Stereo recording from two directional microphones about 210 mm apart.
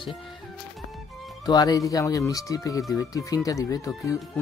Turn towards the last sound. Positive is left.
turn(degrees=15)  # may be behind; listen again after turning